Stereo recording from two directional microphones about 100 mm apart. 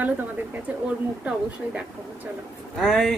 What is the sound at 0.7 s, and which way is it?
Speech, 10° right (ahead or behind).